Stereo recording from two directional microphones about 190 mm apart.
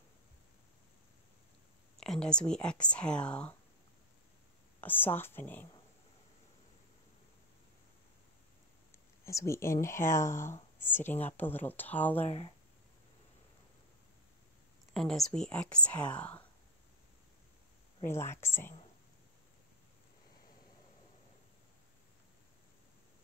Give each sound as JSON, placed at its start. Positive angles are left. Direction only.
{"t": 2.0, "sound": "speech", "side_deg": 5}
{"t": 4.7, "sound": "speech", "side_deg": 10}
{"t": 9.2, "sound": "speech", "side_deg": 15}
{"t": 12.3, "sound": "speech", "side_deg": 30}
{"t": 15.0, "sound": "speech", "side_deg": 0}
{"t": 18.0, "sound": "speech", "side_deg": 15}